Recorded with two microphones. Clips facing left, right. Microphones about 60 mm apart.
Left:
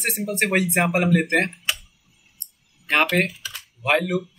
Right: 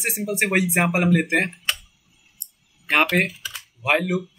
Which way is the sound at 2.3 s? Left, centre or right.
Centre.